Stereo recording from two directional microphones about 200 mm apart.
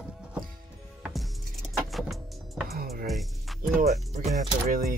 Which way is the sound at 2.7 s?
50° right (ahead or behind).